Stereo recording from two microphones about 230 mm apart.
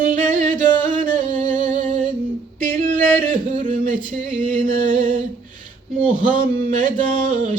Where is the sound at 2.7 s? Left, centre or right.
Right.